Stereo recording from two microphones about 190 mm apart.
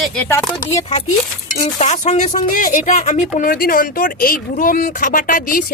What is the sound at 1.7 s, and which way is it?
Speech, 40° left (ahead or behind).